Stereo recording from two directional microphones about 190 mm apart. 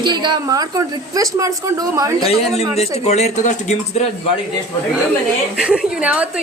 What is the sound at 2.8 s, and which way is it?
Speech, 35° left (ahead or behind).